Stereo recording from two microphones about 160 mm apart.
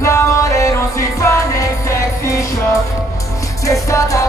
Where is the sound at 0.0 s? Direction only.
15° left (ahead or behind).